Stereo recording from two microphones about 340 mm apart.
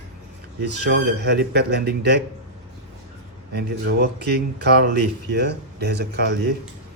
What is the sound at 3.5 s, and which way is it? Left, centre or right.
Speech, right.